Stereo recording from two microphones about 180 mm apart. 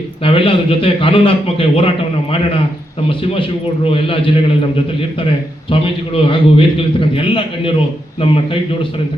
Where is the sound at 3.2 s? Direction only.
30° left (ahead or behind).